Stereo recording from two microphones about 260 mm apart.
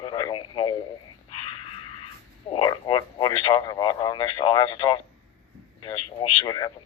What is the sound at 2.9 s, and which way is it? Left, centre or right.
Speech, centre.